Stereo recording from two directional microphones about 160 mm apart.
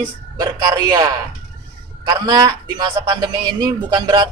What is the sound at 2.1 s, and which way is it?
Speech, 25° right (ahead or behind).